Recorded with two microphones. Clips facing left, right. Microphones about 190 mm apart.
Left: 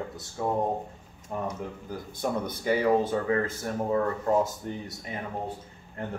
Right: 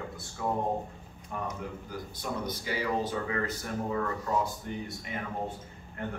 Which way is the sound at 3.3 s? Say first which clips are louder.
Left 5 dB; 40° left (ahead or behind).